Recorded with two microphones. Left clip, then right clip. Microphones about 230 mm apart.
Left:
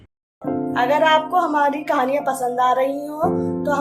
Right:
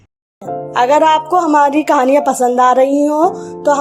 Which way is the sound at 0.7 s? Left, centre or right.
Right.